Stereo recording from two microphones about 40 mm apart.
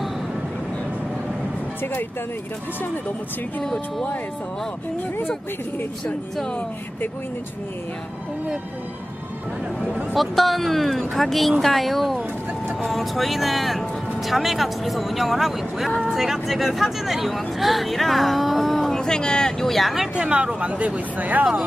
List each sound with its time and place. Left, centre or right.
10.1 s speech: centre
18.9 s speech: centre
19.7 s speech: centre
20.2 s speech: right